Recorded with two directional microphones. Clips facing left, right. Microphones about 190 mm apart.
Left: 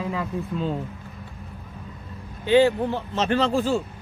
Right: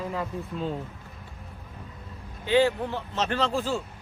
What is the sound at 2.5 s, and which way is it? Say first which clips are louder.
Speech: left 4 dB; 20° left (ahead or behind).